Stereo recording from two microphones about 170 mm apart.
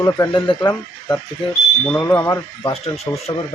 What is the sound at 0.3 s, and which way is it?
Speech, 30° left (ahead or behind).